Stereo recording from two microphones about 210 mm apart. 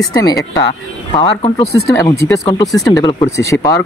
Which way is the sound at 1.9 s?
15° left (ahead or behind).